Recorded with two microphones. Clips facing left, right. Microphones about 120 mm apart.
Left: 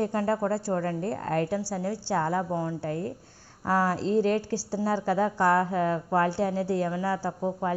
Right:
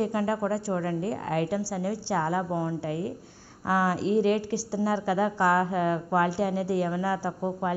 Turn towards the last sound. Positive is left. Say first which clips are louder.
# even
turn(degrees=-10)  # may be behind; listen again after turning